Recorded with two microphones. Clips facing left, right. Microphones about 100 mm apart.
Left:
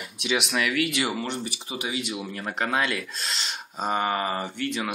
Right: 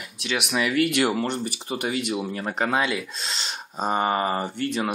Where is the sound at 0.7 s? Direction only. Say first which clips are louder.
Right 5 dB; 55° right (ahead or behind).